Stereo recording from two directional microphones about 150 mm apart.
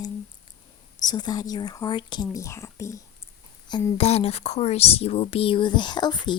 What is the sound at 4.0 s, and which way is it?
Speech, 45° left (ahead or behind).